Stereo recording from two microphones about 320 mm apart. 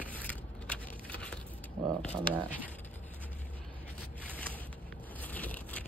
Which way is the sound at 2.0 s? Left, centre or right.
Centre.